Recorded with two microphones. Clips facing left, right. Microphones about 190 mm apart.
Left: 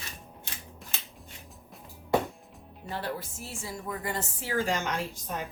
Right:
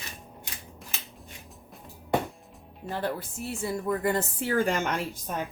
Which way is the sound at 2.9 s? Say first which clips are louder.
Right 4 dB; 55° right (ahead or behind).